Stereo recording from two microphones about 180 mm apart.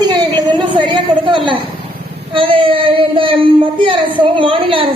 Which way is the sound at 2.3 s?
30° right (ahead or behind).